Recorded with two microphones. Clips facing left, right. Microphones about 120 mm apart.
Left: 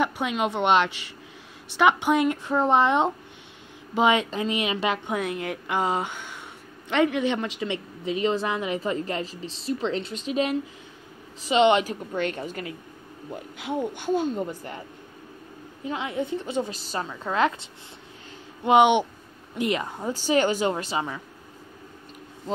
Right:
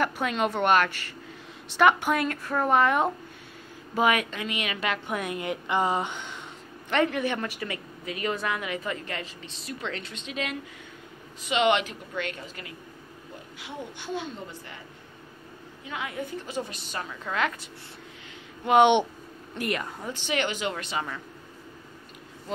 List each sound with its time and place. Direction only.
0.0 s a woman's voice: 10° left (ahead or behind); by 5.1 s 30° left (ahead or behind)
5.2 s a woman's voice: centre (ahead or behind)
5.7 s a woman's voice: 10° left (ahead or behind); by 14.8 s 45° left (ahead or behind)
15.8 s a woman's voice: 30° left (ahead or behind)
18.8 s a woman's voice: 10° left (ahead or behind)
19.6 s a woman's voice: 25° left (ahead or behind)
20.1 s a woman's voice: 35° left (ahead or behind)